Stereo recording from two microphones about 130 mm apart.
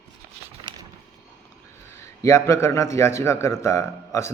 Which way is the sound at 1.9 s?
20° left (ahead or behind).